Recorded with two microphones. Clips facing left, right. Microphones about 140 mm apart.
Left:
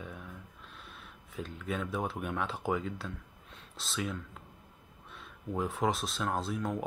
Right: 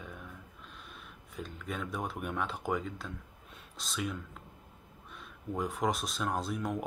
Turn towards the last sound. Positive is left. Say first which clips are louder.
# left 1 dB
turn(degrees=0)  # may be behind; listen again after turning